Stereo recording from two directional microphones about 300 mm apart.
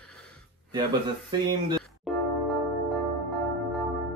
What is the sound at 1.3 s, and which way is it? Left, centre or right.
Speech, centre.